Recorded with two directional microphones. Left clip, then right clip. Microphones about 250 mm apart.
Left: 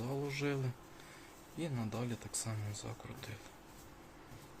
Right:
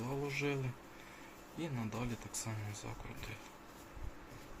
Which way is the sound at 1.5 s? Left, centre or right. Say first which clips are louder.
Left 1 dB; left.